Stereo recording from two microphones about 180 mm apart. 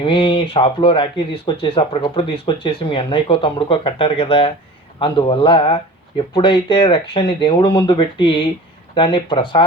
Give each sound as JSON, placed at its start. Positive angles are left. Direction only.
{"t": 0.0, "sound": "speech", "side_deg": 30}